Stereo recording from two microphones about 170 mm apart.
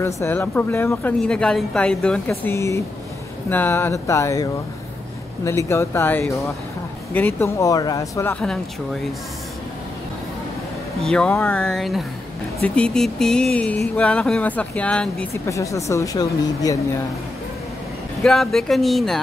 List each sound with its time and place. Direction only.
0.0 s speech: 15° left (ahead or behind)
11.0 s speech: 5° left (ahead or behind)
15.4 s speech: 20° left (ahead or behind)
18.2 s speech: 5° left (ahead or behind)